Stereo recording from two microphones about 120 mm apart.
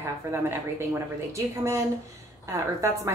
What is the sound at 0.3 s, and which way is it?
A woman's voice, 20° right (ahead or behind).